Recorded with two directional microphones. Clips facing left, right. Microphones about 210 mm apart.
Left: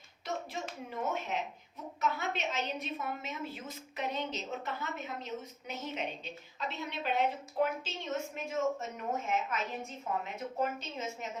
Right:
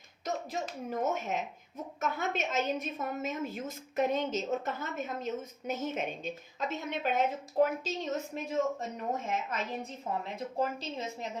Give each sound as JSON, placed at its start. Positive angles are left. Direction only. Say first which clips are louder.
{"t": 0.6, "sound": "a woman's voice", "louder": "right 5 dB", "side_deg": -45}